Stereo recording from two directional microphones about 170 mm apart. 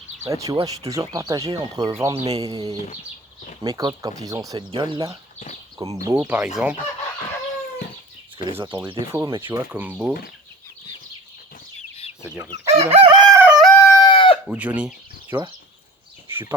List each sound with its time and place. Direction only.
0.2 s speech: 20° right (ahead or behind)
6.2 s speech: 5° right (ahead or behind)
9.1 s speech: 25° right (ahead or behind)
9.6 s speech: 10° right (ahead or behind)
11.8 s chicken: 35° left (ahead or behind)
12.5 s chicken: 40° right (ahead or behind)
13.4 s a sound: 5° right (ahead or behind)
13.7 s chicken: 15° left (ahead or behind)
14.0 s chicken: 30° left (ahead or behind)
14.4 s speech: 10° right (ahead or behind)